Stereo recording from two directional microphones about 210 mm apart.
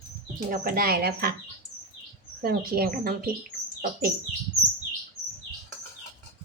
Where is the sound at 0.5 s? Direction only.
40° right (ahead or behind).